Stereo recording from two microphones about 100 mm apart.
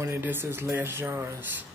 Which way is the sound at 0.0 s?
25° right (ahead or behind).